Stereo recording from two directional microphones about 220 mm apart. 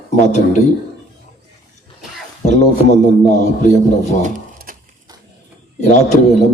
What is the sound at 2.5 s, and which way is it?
A man's voice, 30° left (ahead or behind).